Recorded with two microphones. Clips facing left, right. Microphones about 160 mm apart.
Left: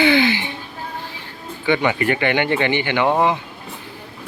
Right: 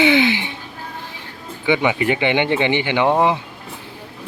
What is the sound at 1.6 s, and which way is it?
Speech, 15° right (ahead or behind).